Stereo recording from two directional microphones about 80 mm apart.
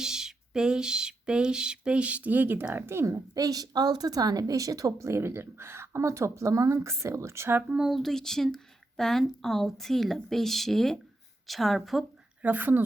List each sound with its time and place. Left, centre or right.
0.0 s a sound: centre
2.7 s a woman's voice: right
3.3 s a woman's voice: right
7.9 s speech: centre
12.4 s a woman's voice: right